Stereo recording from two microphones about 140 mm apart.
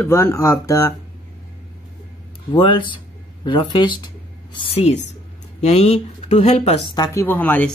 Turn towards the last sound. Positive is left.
turn(degrees=10)  # may be behind; listen again after turning